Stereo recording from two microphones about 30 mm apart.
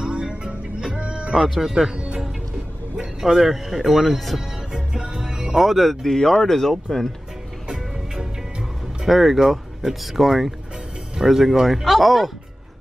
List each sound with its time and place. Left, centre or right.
0.0 s music: right
1.8 s speech: centre
3.2 s speech: centre
4.7 s music: right
5.6 s speech: centre
6.0 s speech: centre
7.6 s music: right
9.0 s speech: centre